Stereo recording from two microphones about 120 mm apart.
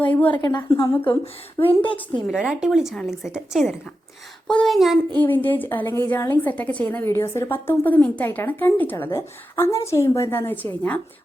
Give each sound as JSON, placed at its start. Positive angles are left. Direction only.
{"t": 0.0, "sound": "a woman's voice", "side_deg": 10}
{"t": 0.3, "sound": "a woman's voice", "side_deg": 40}
{"t": 1.2, "sound": "speech", "side_deg": 50}
{"t": 2.3, "sound": "a woman's voice", "side_deg": -5}
{"t": 5.1, "sound": "a woman's voice", "side_deg": 15}